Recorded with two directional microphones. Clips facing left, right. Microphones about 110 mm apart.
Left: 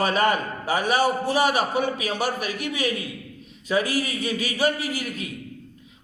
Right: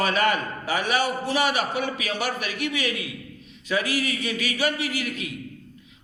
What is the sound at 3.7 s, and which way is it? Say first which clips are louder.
A man's voice: left 2 dB; 40° left (ahead or behind).